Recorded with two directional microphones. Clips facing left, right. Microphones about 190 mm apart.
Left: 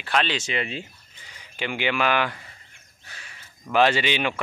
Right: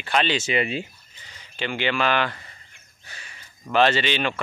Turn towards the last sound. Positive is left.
turn(degrees=10)  # may be behind; listen again after turning